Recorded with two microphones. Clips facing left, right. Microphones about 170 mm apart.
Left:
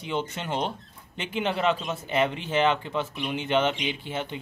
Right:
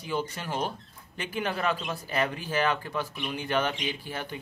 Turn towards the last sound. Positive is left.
turn(degrees=20)  # may be behind; listen again after turning